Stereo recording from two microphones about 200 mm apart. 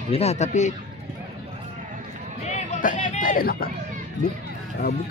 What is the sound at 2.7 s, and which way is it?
Music, 40° left (ahead or behind).